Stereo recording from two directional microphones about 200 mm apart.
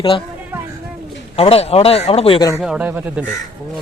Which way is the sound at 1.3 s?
30° left (ahead or behind).